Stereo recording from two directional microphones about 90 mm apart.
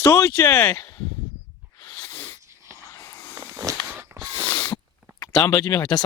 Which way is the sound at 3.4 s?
35° right (ahead or behind).